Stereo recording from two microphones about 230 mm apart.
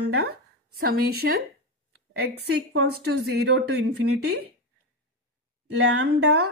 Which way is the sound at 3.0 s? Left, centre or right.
Right.